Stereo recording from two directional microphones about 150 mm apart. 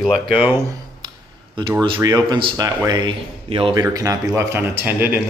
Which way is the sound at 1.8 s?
25° right (ahead or behind).